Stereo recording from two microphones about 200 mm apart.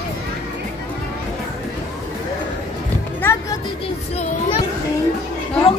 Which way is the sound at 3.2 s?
15° left (ahead or behind).